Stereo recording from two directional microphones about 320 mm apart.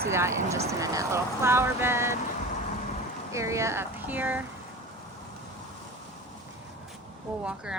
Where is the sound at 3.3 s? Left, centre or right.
Centre.